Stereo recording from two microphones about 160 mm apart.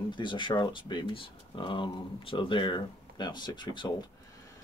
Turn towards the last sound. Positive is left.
turn(degrees=30)  # may be behind; listen again after turning